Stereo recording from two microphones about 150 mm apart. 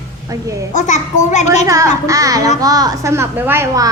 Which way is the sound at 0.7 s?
55° left (ahead or behind).